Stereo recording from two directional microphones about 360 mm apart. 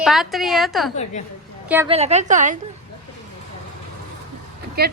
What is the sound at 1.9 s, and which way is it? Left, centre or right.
Speech, centre.